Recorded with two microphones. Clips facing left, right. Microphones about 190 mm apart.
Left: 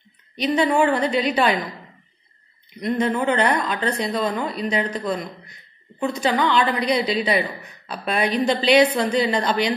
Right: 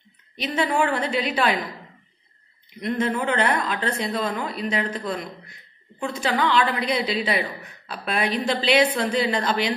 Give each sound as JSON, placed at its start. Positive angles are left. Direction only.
{"t": 0.4, "sound": "a woman's voice", "side_deg": -5}
{"t": 3.0, "sound": "a woman's voice", "side_deg": -5}